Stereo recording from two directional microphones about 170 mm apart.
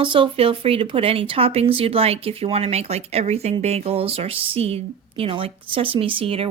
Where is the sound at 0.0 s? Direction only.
30° right (ahead or behind).